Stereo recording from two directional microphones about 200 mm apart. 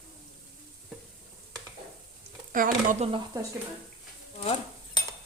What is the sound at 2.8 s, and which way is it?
Speech, 30° right (ahead or behind).